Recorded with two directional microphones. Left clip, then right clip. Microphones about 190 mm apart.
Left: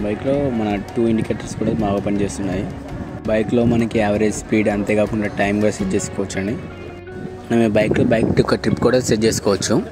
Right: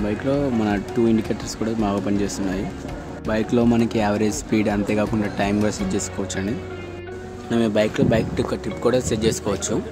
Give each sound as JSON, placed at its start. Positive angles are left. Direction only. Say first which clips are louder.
{"t": 0.0, "sound": "speech", "louder": "left 3 dB", "side_deg": -5}
{"t": 7.4, "sound": "speech", "louder": "left 4 dB", "side_deg": 15}
{"t": 8.4, "sound": "speech", "louder": "left 7 dB", "side_deg": 30}